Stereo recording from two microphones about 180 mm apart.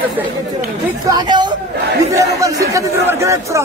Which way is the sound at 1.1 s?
25° right (ahead or behind).